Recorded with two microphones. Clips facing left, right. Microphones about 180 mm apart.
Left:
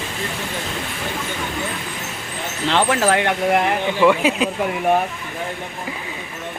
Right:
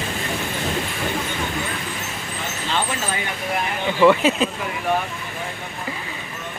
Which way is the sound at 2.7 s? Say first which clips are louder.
Left 9 dB; 80° left.